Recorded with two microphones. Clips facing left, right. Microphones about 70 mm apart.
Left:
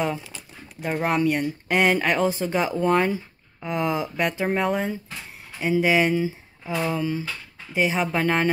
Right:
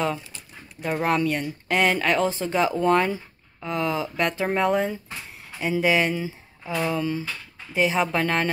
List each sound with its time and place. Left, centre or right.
0.7 s speech: centre
3.6 s speech: centre
4.3 s speech: centre